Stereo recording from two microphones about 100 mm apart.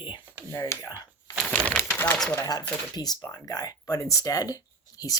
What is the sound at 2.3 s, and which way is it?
Speech, 40° left (ahead or behind).